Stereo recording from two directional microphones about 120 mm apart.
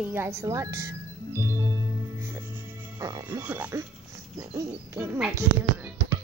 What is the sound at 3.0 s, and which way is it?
Music, 30° right (ahead or behind).